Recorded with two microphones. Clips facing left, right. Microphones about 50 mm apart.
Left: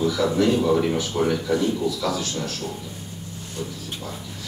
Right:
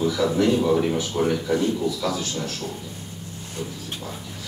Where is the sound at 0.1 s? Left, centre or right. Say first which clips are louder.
Even; centre.